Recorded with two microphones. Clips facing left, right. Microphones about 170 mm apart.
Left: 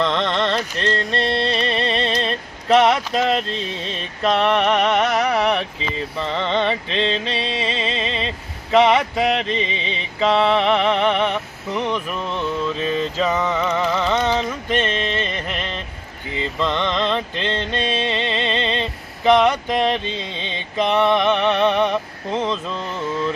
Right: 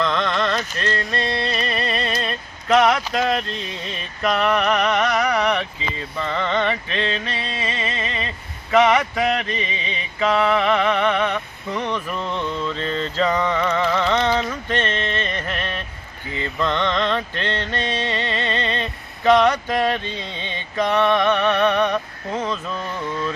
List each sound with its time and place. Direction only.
0.0 s music: 30° left (ahead or behind)
0.8 s a sound: 25° left (ahead or behind)
4.2 s music: 25° left (ahead or behind)
8.7 s mantra: 25° left (ahead or behind)